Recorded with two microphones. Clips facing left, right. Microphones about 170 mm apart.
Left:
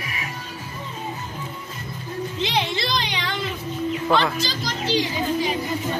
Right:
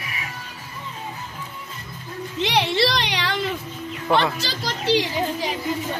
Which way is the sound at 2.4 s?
70° right (ahead or behind).